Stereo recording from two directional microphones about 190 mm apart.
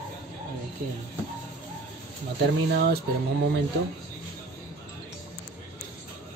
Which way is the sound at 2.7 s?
55° right (ahead or behind).